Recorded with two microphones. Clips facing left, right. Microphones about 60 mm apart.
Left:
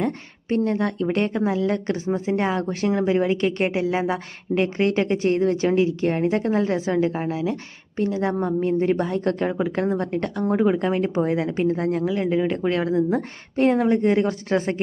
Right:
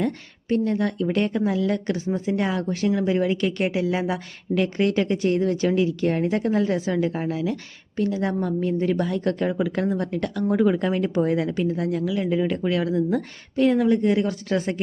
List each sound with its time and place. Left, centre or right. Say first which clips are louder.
0.0 s a woman's voice: even; left
13.6 s a woman's voice: even; left